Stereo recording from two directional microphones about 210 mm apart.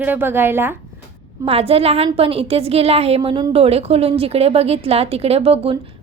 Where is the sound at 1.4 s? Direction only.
30° right (ahead or behind).